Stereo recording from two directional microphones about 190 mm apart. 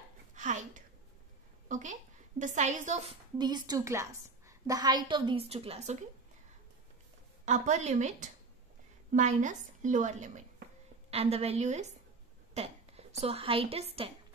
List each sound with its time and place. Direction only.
0.3 s a sound: 40° right (ahead or behind)
1.7 s a woman's voice: 40° right (ahead or behind)
3.3 s a woman's voice: 20° right (ahead or behind)
7.4 s a woman's voice: 40° right (ahead or behind)